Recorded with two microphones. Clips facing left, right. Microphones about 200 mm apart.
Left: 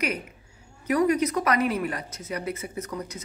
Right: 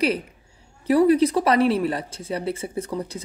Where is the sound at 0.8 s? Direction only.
30° right (ahead or behind).